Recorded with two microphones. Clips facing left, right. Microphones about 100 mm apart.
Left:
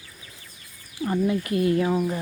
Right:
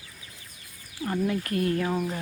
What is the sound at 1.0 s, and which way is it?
Speech, 10° left (ahead or behind).